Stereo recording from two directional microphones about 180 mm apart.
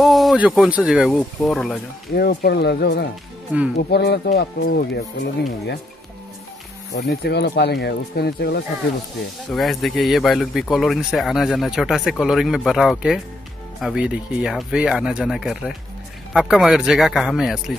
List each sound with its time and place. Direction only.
0.0 s speech: centre (ahead or behind)
2.1 s speech: 60° left (ahead or behind)
6.9 s speech: 65° left (ahead or behind)
9.5 s speech: centre (ahead or behind)